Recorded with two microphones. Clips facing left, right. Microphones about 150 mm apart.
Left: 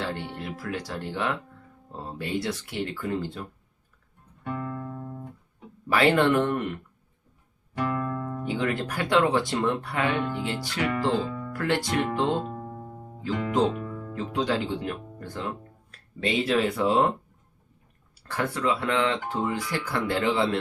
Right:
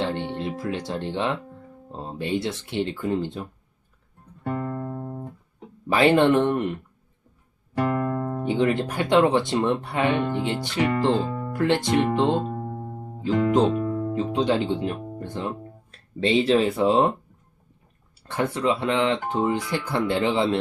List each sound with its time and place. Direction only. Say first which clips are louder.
0.0 s speech: right 6 dB; 25° right (ahead or behind)
4.4 s music: right 4 dB; 40° right (ahead or behind)
5.9 s speech: right 3 dB; 25° right (ahead or behind)
7.8 s music: right 5 dB; 50° right (ahead or behind)
8.4 s speech: right 6 dB; 25° right (ahead or behind)
11.3 s music: right 4 dB; 40° right (ahead or behind)
11.5 s speech: right 5 dB; 25° right (ahead or behind)
12.5 s music: right 5 dB; 40° right (ahead or behind)
13.8 s guitar: right 10 dB; 50° right (ahead or behind)
14.1 s speech: right 3 dB; 25° right (ahead or behind)
18.3 s speech: right 3 dB; 20° right (ahead or behind)